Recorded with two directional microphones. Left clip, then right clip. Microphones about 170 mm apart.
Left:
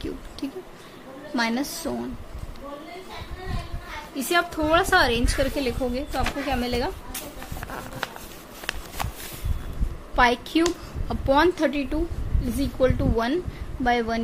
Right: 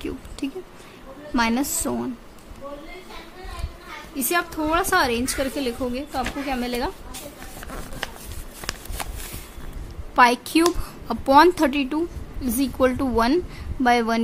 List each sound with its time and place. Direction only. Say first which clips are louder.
0.4 s a woman's voice: right 3 dB; 35° right (ahead or behind)
4.1 s a woman's voice: left 1 dB; 35° right (ahead or behind)
10.1 s a woman's voice: right 4 dB; 50° right (ahead or behind)